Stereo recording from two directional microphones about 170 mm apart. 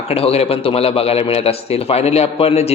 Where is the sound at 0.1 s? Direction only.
35° left (ahead or behind).